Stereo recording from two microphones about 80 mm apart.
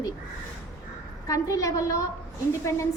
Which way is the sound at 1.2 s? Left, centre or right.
Left.